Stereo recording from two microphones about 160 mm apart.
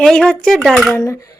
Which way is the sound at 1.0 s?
20° left (ahead or behind).